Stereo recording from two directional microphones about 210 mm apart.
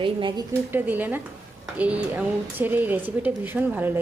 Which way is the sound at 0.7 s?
10° right (ahead or behind).